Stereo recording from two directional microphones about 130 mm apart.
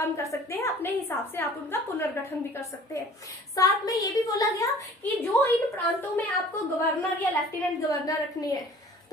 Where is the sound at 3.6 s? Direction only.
30° left (ahead or behind).